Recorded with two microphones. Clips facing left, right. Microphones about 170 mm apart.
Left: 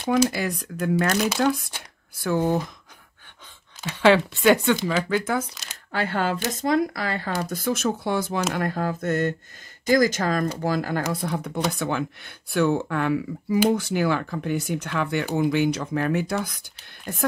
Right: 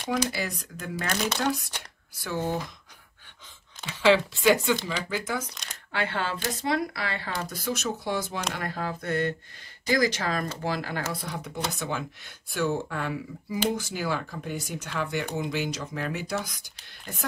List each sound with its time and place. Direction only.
0.3 s speech: 55° left (ahead or behind)
4.0 s speech: 60° left (ahead or behind)
5.5 s a sound: 5° left (ahead or behind)
5.9 s speech: 45° left (ahead or behind)
11.2 s speech: 55° left (ahead or behind)